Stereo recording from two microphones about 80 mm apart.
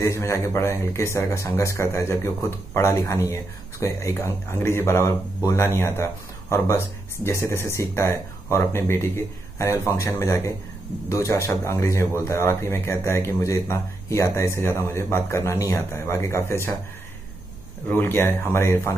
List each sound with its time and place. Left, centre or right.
0.0 s speech: left
17.8 s speech: left